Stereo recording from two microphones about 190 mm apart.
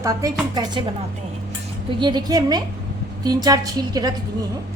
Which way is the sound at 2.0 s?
25° right (ahead or behind).